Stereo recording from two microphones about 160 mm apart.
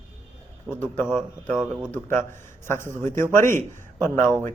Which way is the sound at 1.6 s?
5° right (ahead or behind).